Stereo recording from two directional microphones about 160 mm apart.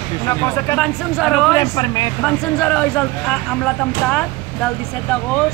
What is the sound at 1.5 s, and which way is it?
Speech, 20° left (ahead or behind).